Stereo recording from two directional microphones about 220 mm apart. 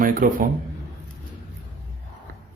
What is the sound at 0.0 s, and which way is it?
Speech, 40° right (ahead or behind).